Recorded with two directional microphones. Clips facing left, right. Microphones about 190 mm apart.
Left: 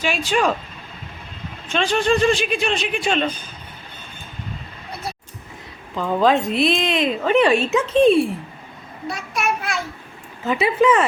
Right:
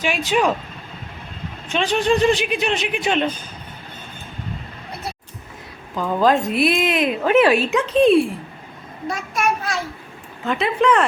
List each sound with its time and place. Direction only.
0.0 s speech: 15° right (ahead or behind)
1.7 s speech: 15° right (ahead or behind)
6.0 s a woman's voice: centre (ahead or behind)
9.0 s child singing: 45° right (ahead or behind)
10.4 s a woman's voice: 5° left (ahead or behind)